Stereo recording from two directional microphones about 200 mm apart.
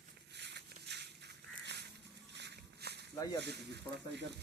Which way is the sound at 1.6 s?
55° right (ahead or behind).